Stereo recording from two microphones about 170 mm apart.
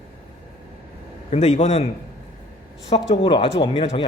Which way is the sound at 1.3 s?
40° left (ahead or behind).